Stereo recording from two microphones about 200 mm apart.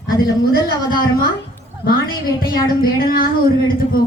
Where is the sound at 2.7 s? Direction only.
45° left (ahead or behind).